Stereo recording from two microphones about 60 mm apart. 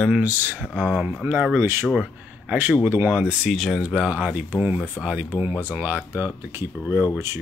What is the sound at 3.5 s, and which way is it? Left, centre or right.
Speech, centre.